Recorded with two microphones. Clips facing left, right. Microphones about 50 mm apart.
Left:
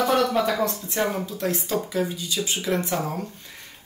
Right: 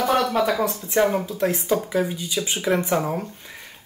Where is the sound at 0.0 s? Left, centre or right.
Centre.